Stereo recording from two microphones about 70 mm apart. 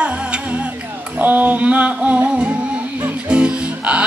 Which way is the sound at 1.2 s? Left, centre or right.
Right.